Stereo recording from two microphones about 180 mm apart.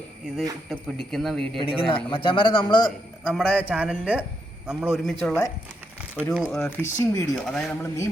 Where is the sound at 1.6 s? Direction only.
30° left (ahead or behind).